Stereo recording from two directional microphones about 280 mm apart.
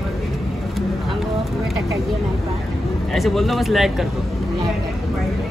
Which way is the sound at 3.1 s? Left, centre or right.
Centre.